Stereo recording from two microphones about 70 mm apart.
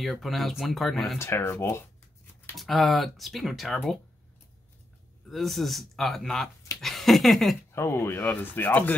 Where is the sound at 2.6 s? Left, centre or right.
Centre.